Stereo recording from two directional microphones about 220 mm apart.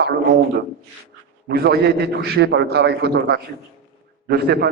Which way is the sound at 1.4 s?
45° right (ahead or behind).